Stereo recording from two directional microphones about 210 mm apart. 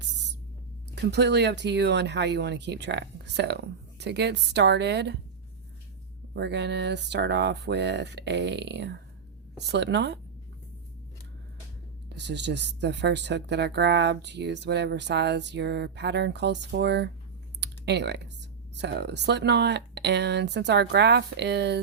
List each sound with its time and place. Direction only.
1.1 s speech: 55° right (ahead or behind)
6.3 s speech: 55° right (ahead or behind)
12.0 s speech: 55° right (ahead or behind)
17.6 s typing: 55° right (ahead or behind)
18.8 s speech: 55° right (ahead or behind)